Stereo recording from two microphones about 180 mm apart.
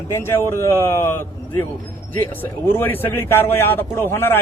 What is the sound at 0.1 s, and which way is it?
Speech, 15° left (ahead or behind).